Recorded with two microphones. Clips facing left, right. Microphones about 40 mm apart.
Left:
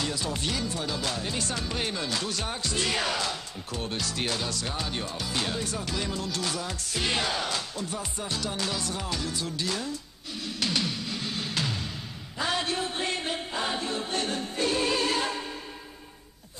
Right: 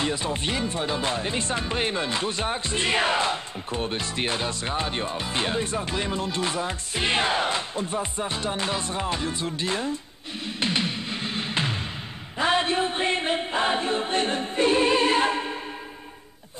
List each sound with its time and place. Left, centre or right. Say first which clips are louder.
0.0 s speech: right 4 dB; right
10.4 s music: right 3 dB; right
12.4 s chant: right 6 dB; right